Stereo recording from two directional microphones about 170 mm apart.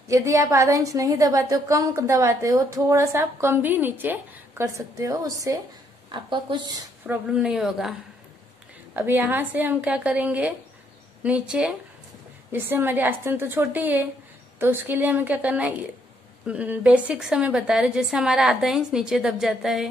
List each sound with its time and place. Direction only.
0.1 s a woman's voice: 20° right (ahead or behind)
7.1 s a woman's voice: 5° right (ahead or behind)
8.9 s a woman's voice: 10° right (ahead or behind)